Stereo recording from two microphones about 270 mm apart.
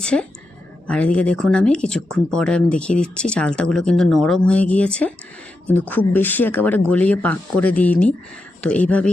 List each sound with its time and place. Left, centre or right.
0.0 s a woman's voice: centre